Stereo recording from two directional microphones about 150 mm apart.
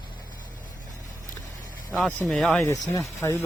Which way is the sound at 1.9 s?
Centre (ahead or behind).